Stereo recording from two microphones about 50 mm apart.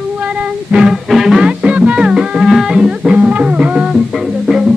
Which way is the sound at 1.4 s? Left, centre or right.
Right.